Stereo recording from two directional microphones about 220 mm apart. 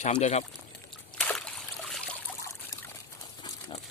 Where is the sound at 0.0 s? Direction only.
30° left (ahead or behind).